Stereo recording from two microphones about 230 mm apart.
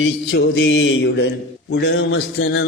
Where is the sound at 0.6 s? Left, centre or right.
Left.